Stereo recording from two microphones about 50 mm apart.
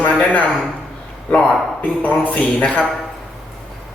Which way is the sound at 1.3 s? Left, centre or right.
Left.